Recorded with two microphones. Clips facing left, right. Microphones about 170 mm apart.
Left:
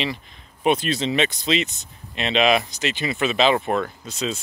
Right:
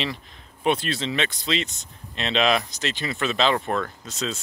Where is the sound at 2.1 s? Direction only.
5° left (ahead or behind).